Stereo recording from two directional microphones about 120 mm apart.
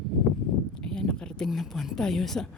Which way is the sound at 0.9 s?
5° left (ahead or behind).